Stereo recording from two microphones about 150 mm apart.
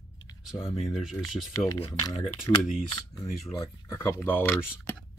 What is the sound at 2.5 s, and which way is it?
Speech, 20° left (ahead or behind).